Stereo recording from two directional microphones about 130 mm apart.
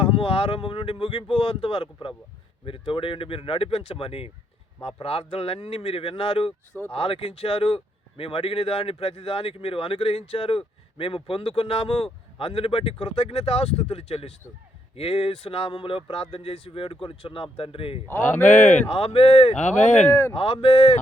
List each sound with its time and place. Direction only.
0.0 s speech: 45° left (ahead or behind)
18.1 s speech: 15° left (ahead or behind)
18.4 s speech: 70° left (ahead or behind)
18.9 s speech: 45° left (ahead or behind); by 20.1 s 70° left (ahead or behind)
20.1 s speech: 20° left (ahead or behind)
20.3 s speech: 45° left (ahead or behind)